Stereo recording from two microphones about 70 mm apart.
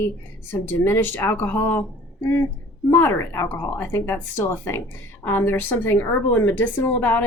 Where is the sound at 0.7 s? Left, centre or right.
Left.